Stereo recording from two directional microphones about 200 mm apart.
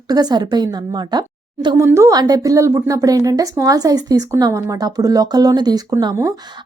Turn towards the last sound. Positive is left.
turn(degrees=-20)  # may be behind; listen again after turning